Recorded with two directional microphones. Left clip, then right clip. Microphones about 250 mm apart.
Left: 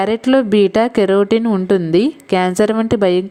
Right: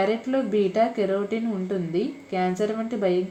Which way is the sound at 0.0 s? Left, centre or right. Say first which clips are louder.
Left 9 dB; left.